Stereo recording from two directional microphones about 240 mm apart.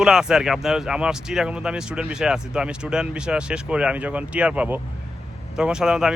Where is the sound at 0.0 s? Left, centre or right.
Centre.